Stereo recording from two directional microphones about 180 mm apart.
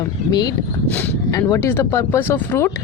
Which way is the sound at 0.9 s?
10° left (ahead or behind).